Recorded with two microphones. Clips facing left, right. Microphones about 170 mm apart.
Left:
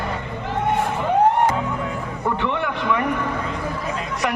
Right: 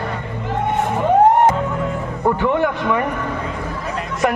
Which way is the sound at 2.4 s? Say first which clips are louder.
Right 6 dB; 45° right (ahead or behind).